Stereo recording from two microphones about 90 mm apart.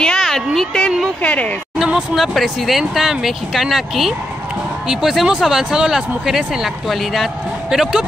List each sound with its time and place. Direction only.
0.0 s a sound: 5° left (ahead or behind)
0.6 s speech: 10° left (ahead or behind)
1.8 s speech: 5° right (ahead or behind)